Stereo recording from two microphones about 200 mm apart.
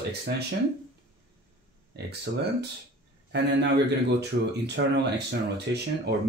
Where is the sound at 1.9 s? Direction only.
55° right (ahead or behind).